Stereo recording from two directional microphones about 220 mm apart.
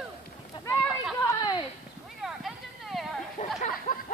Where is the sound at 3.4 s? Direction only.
30° left (ahead or behind).